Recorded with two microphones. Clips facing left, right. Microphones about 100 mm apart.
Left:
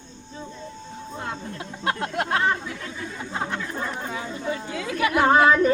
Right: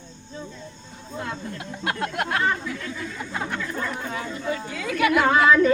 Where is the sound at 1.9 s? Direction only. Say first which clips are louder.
Left 1 dB; 25° left (ahead or behind).